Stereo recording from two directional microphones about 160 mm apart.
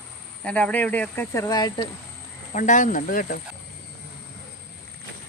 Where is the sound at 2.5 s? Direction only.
55° left (ahead or behind).